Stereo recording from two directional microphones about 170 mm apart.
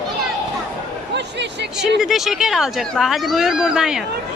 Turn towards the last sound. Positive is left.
turn(degrees=-5)  # may be behind; listen again after turning